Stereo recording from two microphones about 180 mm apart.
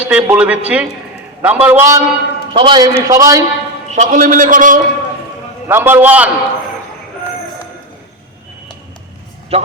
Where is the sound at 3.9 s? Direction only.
45° right (ahead or behind).